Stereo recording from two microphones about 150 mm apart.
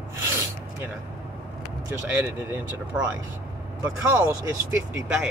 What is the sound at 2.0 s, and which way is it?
Speech, 10° right (ahead or behind).